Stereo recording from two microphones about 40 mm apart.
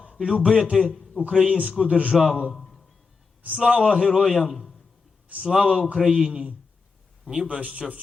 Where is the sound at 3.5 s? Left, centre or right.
Centre.